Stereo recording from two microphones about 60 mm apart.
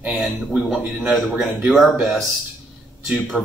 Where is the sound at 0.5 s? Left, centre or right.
Centre.